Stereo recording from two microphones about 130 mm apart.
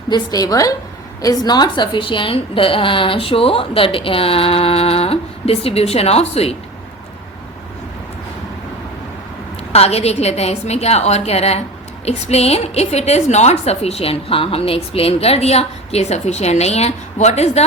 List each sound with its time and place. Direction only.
0.1 s a woman's voice: 30° left (ahead or behind); by 6.6 s 50° left (ahead or behind)
9.7 s a woman's voice: 55° left (ahead or behind)